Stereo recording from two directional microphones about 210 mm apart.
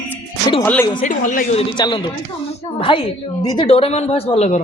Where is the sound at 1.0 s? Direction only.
40° left (ahead or behind).